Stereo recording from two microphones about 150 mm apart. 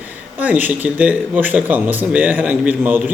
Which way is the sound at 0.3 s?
10° right (ahead or behind).